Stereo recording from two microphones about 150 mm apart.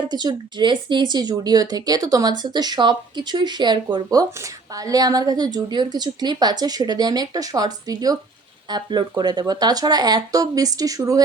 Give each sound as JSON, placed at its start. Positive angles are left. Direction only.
{"t": 0.1, "sound": "speech", "side_deg": -30}